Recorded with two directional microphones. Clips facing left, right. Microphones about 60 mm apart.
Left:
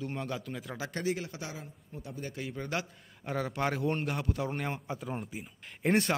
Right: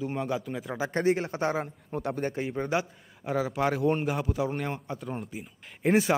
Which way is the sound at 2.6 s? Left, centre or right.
Centre.